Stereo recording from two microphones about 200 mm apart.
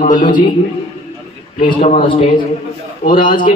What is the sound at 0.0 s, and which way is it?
Speech, 40° left (ahead or behind).